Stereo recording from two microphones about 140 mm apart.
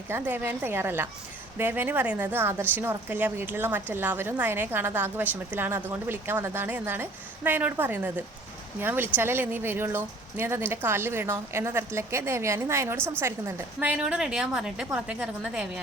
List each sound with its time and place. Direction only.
0.1 s a woman's voice: 15° right (ahead or behind)